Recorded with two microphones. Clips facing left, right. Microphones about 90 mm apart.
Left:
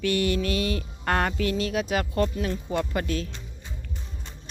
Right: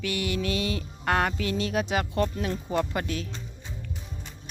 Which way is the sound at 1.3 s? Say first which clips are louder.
Left 2 dB; 25° right (ahead or behind).